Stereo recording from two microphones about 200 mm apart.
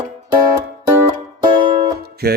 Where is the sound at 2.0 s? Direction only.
50° right (ahead or behind).